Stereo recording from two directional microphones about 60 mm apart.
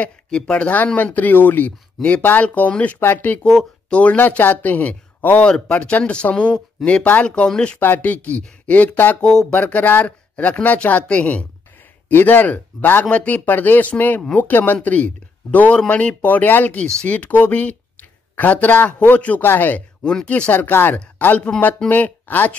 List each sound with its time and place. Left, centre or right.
0.0 s speech: centre; by 1.7 s left
2.0 s speech: centre
7.8 s speech: left
9.2 s speech: centre
9.6 s speech: left
12.1 s speech: left
16.8 s speech: centre
17.1 s speech: left
20.0 s speech: centre
20.5 s speech: left